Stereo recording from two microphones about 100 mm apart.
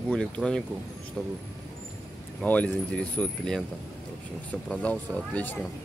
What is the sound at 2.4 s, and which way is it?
Speech, 10° left (ahead or behind).